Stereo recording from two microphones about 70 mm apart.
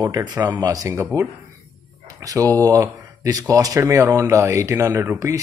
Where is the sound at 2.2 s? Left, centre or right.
Right.